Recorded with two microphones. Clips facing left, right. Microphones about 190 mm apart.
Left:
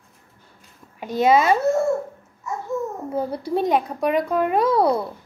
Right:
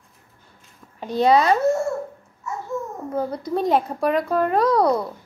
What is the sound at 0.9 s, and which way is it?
Speech, 20° left (ahead or behind).